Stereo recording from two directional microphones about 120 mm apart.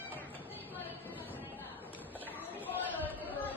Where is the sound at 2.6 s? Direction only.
15° left (ahead or behind).